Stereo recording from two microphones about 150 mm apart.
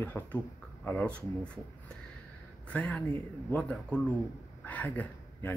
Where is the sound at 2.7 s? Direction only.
10° left (ahead or behind).